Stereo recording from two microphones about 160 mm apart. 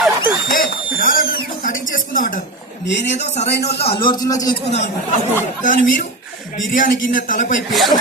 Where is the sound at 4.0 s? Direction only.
25° left (ahead or behind).